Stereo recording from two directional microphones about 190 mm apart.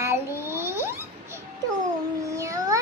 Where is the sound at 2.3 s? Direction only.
15° right (ahead or behind).